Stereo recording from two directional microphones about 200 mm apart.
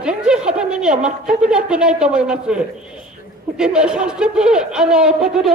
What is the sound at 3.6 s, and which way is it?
Speech, 5° right (ahead or behind).